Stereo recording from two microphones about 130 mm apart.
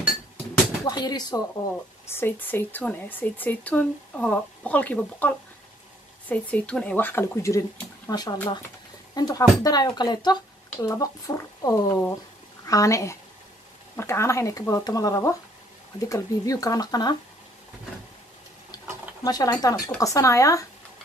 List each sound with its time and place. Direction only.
0.8 s speech: 30° left (ahead or behind)
2.0 s speech: 15° left (ahead or behind)
8.1 s speech: 30° left (ahead or behind)
19.2 s speech: 30° left (ahead or behind)